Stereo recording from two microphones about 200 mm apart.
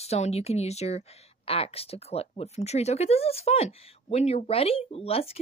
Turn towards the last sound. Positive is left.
turn(degrees=30)  # may be behind; listen again after turning